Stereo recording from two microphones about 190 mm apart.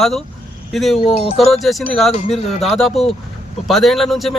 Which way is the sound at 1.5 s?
Centre (ahead or behind).